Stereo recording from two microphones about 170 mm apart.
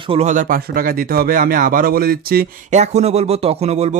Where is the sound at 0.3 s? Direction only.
55° right (ahead or behind).